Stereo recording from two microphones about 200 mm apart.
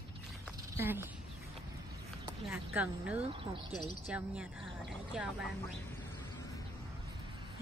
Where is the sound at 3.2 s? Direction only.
25° right (ahead or behind).